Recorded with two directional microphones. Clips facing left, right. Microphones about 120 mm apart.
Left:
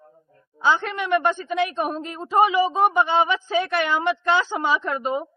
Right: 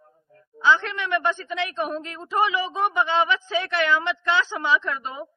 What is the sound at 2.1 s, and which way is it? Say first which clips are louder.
A man's voice: left 6 dB; 35° left (ahead or behind).